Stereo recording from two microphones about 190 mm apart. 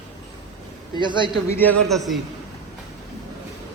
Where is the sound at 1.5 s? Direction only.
10° left (ahead or behind).